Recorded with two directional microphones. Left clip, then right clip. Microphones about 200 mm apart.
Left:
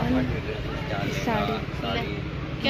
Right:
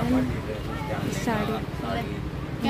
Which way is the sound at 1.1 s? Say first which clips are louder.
Left 1 dB; 15° right (ahead or behind).